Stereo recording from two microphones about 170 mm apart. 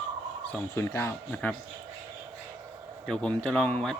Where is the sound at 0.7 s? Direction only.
15° left (ahead or behind).